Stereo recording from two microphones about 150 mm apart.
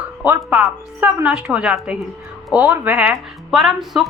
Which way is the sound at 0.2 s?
10° right (ahead or behind).